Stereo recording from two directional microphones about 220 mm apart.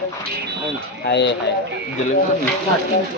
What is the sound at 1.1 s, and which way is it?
Speech, 50° left (ahead or behind).